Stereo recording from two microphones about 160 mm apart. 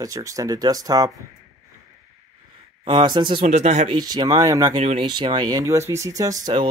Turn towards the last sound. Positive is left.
turn(degrees=-25)  # may be behind; listen again after turning